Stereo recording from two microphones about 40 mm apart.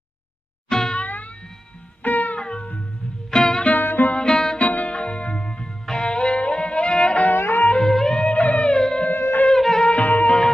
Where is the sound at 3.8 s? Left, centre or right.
Left.